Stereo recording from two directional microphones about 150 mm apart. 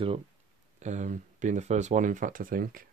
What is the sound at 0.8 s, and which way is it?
Speech, 55° right (ahead or behind).